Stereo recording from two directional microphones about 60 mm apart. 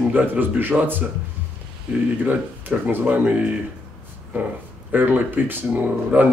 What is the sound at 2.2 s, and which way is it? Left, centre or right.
Speech, right.